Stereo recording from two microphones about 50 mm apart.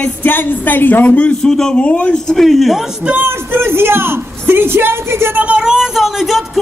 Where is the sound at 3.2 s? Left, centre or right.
Right.